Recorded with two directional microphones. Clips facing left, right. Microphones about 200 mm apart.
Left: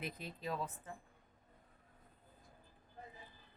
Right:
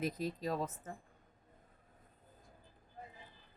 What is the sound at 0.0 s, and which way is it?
Speech, 40° right (ahead or behind).